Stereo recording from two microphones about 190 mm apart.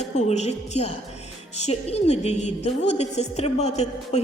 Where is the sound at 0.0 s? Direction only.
35° left (ahead or behind).